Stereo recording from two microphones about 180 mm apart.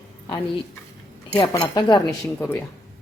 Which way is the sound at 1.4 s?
25° left (ahead or behind).